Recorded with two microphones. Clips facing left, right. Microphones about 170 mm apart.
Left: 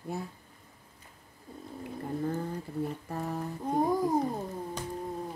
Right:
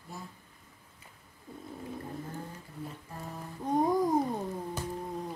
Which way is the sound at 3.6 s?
Centre (ahead or behind).